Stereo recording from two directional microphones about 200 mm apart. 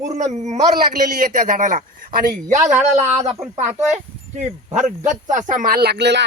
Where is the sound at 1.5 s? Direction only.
40° right (ahead or behind).